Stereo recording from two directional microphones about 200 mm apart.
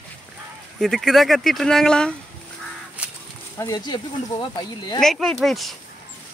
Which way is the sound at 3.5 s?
20° left (ahead or behind).